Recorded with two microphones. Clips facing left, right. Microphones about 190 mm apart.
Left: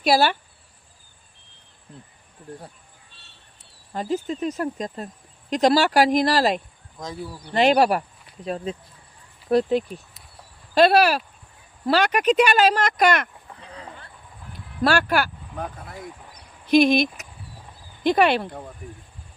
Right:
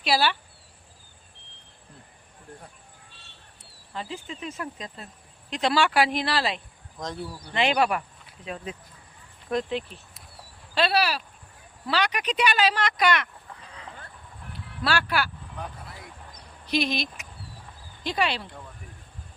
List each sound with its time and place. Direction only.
0.0 s speech: 45° left (ahead or behind)
3.9 s speech: 45° left (ahead or behind)
7.0 s speech: 5° left (ahead or behind)
7.5 s speech: 40° left (ahead or behind)
14.8 s speech: 45° left (ahead or behind)